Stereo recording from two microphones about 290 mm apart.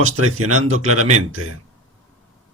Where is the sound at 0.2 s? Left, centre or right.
Right.